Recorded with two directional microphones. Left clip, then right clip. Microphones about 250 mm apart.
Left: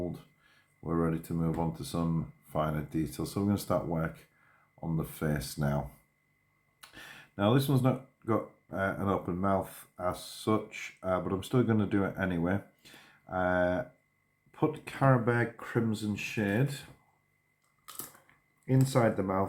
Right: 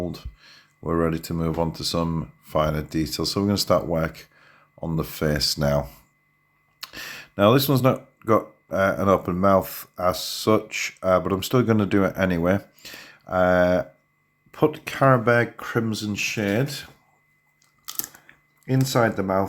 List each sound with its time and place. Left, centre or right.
0.0 s speech: right
14.8 s speech: right
18.6 s speech: right